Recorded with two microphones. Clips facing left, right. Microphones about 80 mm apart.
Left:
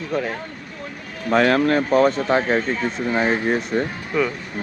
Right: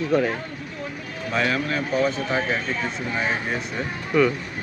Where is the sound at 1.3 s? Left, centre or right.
Left.